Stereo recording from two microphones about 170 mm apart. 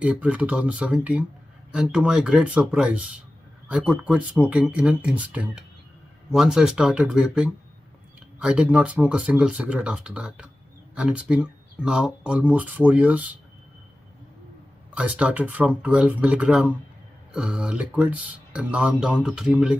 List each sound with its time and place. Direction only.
0.0 s speech: 10° right (ahead or behind)
15.0 s speech: 5° right (ahead or behind)